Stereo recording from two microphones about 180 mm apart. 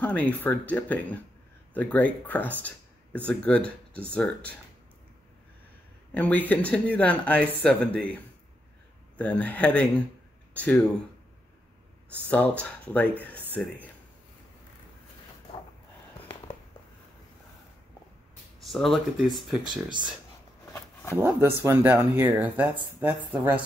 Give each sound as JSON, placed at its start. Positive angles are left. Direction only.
{"t": 0.0, "sound": "speech", "side_deg": 10}
{"t": 6.1, "sound": "speech", "side_deg": 10}
{"t": 9.2, "sound": "speech", "side_deg": 10}
{"t": 12.3, "sound": "speech", "side_deg": 5}
{"t": 18.6, "sound": "speech", "side_deg": 0}
{"t": 19.7, "sound": "speech", "side_deg": -25}
{"t": 21.2, "sound": "speech", "side_deg": -15}